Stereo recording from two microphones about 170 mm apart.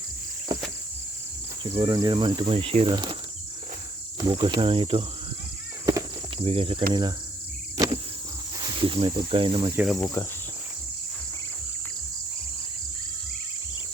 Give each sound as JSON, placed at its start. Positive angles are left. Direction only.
{"t": 1.8, "sound": "speech", "side_deg": -25}
{"t": 4.2, "sound": "speech", "side_deg": -30}
{"t": 5.8, "sound": "a sound", "side_deg": -20}
{"t": 6.4, "sound": "speech", "side_deg": -35}
{"t": 7.8, "sound": "cricket", "side_deg": -25}
{"t": 8.5, "sound": "speech", "side_deg": -25}
{"t": 9.7, "sound": "speech", "side_deg": 0}